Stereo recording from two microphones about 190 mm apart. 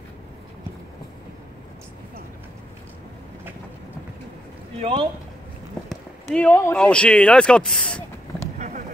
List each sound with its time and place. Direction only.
4.7 s speech: 30° right (ahead or behind)
6.3 s speech: 10° left (ahead or behind)
8.5 s a sound: 40° right (ahead or behind)